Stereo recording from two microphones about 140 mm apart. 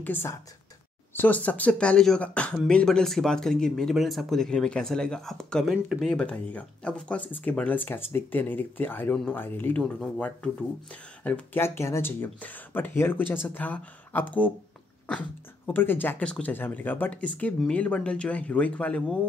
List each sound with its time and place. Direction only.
0.0 s speech: 15° left (ahead or behind)